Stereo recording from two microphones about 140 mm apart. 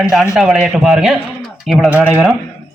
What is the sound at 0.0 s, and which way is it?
A man's voice, centre (ahead or behind).